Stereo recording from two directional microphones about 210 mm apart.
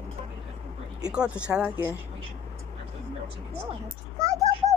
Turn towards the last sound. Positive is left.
turn(degrees=-15)  # may be behind; listen again after turning